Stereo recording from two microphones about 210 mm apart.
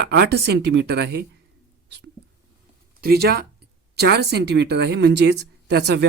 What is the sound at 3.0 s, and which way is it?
Speech, 50° right (ahead or behind).